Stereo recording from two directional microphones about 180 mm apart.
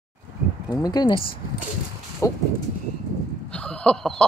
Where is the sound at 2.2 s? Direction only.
20° left (ahead or behind).